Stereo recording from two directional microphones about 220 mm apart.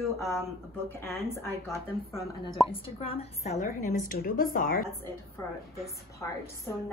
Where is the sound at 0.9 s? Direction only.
10° left (ahead or behind).